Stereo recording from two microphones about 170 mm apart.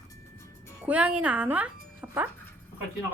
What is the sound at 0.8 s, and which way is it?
Speech, 10° right (ahead or behind).